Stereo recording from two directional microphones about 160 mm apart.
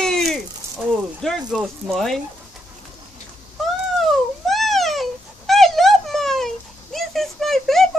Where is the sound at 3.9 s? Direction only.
Centre (ahead or behind).